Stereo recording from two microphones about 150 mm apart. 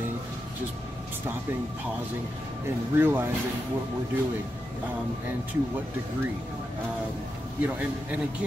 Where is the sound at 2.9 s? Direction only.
15° right (ahead or behind).